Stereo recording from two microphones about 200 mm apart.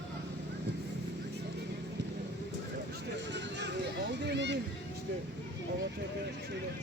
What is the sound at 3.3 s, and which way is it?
Music, 60° right (ahead or behind).